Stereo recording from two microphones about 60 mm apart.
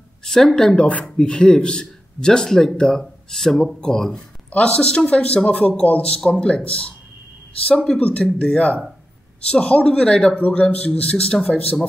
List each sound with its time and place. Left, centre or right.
0.2 s a man's voice: centre; by 6.2 s left
6.2 s a man's voice: centre